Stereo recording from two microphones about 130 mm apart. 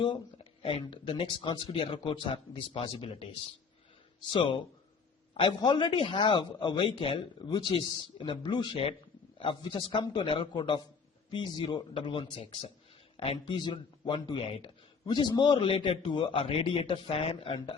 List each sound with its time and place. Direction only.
0.6 s a man's voice: 45° left (ahead or behind)
15.0 s a man's voice: 35° left (ahead or behind)